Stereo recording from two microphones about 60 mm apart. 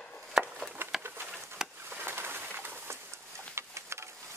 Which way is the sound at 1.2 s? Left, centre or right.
Centre.